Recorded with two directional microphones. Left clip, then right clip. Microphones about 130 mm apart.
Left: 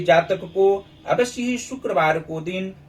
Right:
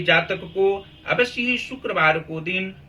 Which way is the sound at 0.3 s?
25° left (ahead or behind).